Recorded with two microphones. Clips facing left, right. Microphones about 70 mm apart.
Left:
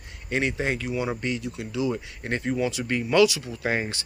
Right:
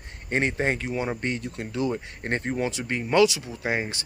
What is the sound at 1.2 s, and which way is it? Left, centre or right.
Speech, right.